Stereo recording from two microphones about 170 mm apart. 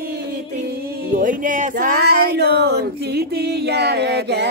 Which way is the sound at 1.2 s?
50° right (ahead or behind).